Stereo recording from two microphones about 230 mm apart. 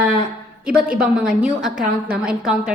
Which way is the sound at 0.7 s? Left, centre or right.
Right.